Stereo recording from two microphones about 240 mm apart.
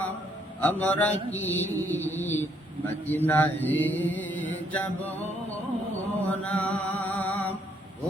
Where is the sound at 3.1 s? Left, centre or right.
Centre.